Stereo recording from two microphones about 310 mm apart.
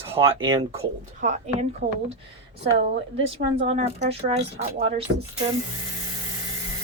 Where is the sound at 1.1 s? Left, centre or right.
Right.